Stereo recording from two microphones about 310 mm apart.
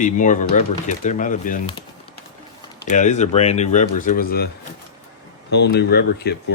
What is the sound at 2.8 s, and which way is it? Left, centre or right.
Speech, left.